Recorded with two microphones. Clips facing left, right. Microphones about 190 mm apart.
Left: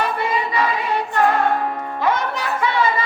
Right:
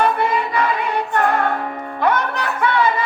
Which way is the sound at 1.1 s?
60° right (ahead or behind).